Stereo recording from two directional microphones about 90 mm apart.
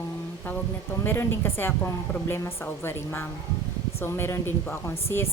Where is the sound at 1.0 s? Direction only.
25° left (ahead or behind).